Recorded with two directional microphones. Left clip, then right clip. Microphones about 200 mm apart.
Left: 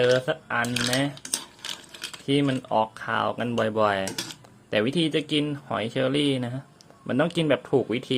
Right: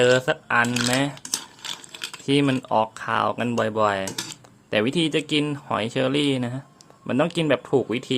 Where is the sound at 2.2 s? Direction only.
15° right (ahead or behind).